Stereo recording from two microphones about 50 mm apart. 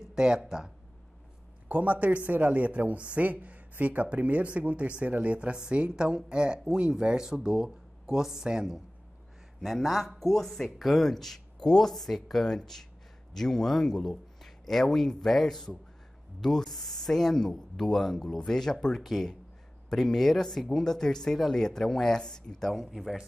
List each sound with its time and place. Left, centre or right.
0.1 s speech: centre
1.7 s speech: right; by 8.8 s centre
9.6 s speech: centre
22.7 s speech: centre